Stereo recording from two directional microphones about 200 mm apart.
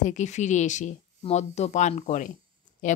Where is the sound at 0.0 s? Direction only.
35° left (ahead or behind).